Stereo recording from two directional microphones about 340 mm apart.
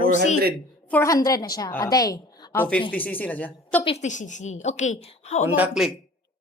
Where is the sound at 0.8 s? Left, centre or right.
Centre.